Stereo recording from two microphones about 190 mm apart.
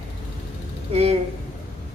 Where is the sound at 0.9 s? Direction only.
35° right (ahead or behind).